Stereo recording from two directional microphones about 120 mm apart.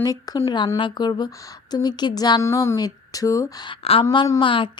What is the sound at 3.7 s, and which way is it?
Speech, 50° left (ahead or behind).